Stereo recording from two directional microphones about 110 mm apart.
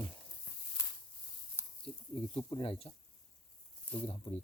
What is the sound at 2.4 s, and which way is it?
Speech, 50° left (ahead or behind).